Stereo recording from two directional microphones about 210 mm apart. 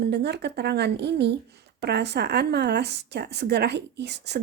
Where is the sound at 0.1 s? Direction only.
50° right (ahead or behind).